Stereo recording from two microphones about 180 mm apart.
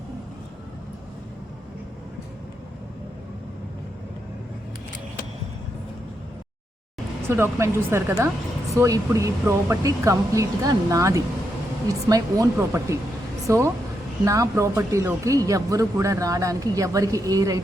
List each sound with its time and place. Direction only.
7.3 s speech: 15° right (ahead or behind)